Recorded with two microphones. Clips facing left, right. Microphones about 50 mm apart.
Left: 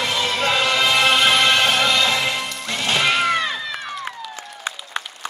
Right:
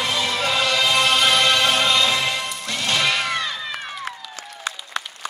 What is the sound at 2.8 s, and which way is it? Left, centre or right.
Cat, left.